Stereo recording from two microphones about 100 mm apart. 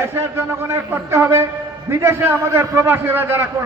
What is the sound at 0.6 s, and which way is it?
A man's voice, 25° right (ahead or behind).